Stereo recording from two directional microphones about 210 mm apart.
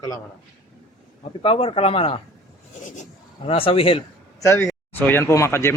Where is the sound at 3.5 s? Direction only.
25° left (ahead or behind).